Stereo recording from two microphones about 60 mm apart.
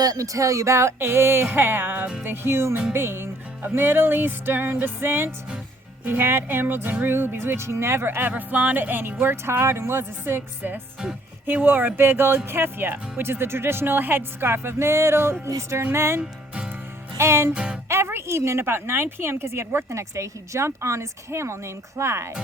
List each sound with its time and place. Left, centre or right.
0.0 s a woman's voice: right
8.3 s music: right
9.2 s a woman's voice: right
17.5 s music: centre
17.8 s a woman's voice: right